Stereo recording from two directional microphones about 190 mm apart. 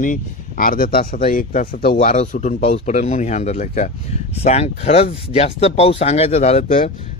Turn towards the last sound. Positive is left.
turn(degrees=40)  # may be behind; listen again after turning